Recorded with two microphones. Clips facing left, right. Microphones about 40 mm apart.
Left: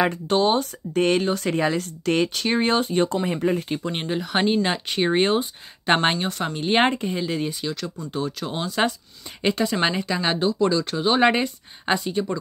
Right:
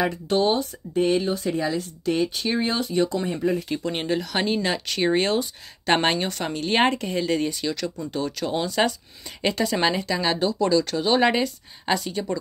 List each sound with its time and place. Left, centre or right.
0.0 s speech: left
3.9 s speech: centre
4.2 s speech: left
5.9 s speech: centre
6.6 s speech: left
7.1 s speech: centre; by 12.0 s left
12.0 s speech: centre